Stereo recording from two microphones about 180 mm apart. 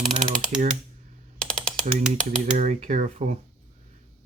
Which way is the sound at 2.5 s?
40° right (ahead or behind).